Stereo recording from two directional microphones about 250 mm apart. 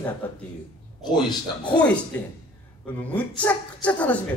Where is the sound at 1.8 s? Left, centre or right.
Centre.